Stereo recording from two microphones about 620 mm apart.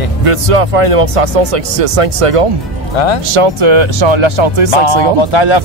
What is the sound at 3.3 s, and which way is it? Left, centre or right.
Speech, right.